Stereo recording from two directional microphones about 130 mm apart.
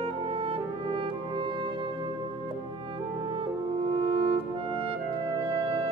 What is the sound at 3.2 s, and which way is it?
Music, 40° right (ahead or behind).